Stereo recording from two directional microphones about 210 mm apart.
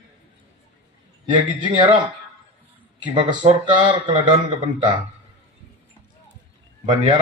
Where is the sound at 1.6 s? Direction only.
20° right (ahead or behind).